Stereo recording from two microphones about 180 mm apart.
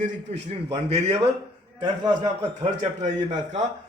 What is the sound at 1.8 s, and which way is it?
Speech, 25° right (ahead or behind).